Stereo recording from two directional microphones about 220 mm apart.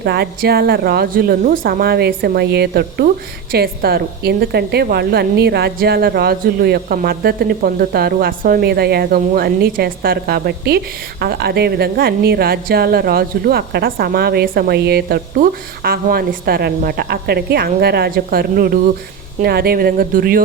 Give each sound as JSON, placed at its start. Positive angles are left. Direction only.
{"t": 0.0, "sound": "a woman's voice", "side_deg": -45}